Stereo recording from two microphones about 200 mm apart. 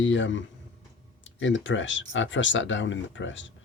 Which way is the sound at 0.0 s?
70° left (ahead or behind).